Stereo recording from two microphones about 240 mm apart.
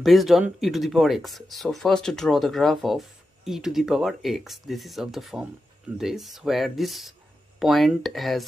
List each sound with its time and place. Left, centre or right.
0.0 s speech: centre